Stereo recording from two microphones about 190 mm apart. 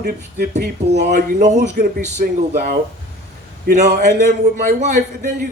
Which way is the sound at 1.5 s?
60° right (ahead or behind).